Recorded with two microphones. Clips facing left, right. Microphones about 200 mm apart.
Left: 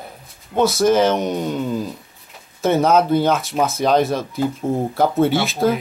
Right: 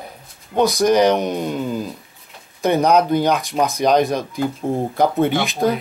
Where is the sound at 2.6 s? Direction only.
15° right (ahead or behind).